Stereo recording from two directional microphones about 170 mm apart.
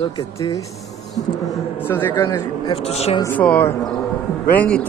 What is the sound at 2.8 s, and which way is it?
Speech, 35° left (ahead or behind).